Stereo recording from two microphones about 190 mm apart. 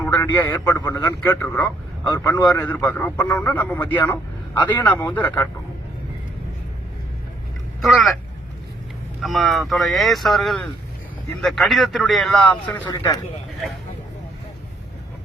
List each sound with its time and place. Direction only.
0.0 s a sound: 10° left (ahead or behind)
0.6 s a man's voice: 20° left (ahead or behind)
7.8 s speech: centre (ahead or behind)
9.2 s a man's voice: centre (ahead or behind); by 13.1 s 15° left (ahead or behind)